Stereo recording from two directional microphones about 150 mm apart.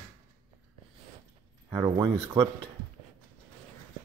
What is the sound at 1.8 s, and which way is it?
Speech, 30° right (ahead or behind).